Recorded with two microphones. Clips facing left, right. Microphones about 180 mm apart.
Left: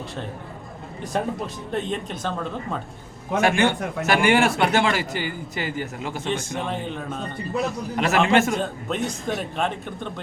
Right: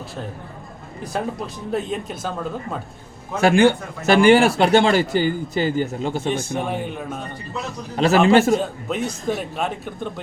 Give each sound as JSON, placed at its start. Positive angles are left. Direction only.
{"t": 1.1, "sound": "speech", "side_deg": 0}
{"t": 3.4, "sound": "speech", "side_deg": -35}
{"t": 6.2, "sound": "speech", "side_deg": -10}
{"t": 7.9, "sound": "speech", "side_deg": -30}
{"t": 8.9, "sound": "speech", "side_deg": -5}